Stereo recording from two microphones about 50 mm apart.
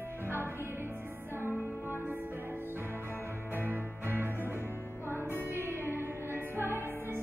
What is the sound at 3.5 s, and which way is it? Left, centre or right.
Music, right.